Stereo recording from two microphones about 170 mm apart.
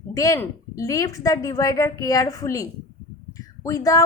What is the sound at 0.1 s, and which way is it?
A woman's voice, 20° left (ahead or behind).